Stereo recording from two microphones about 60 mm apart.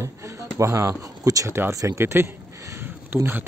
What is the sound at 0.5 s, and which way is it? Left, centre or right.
Speech, right.